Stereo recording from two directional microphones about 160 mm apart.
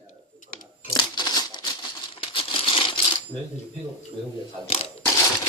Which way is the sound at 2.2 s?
35° left (ahead or behind).